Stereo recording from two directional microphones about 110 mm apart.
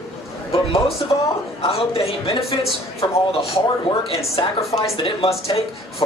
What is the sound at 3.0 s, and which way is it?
Speech, 45° left (ahead or behind).